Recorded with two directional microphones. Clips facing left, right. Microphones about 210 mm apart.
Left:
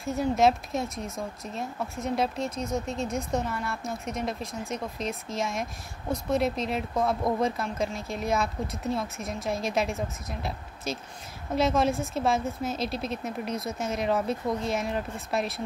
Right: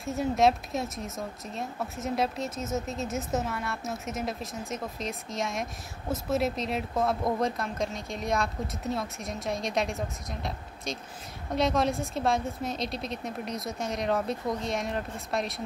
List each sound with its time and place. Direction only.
0.0 s speech: centre (ahead or behind)